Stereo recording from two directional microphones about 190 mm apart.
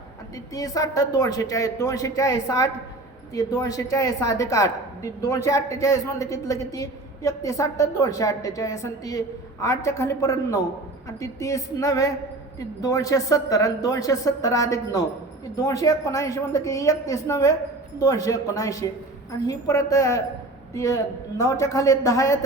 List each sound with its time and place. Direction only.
0.5 s a woman's voice: 20° left (ahead or behind)